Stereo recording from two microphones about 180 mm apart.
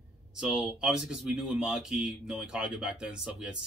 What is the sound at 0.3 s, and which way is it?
Speech, 5° right (ahead or behind).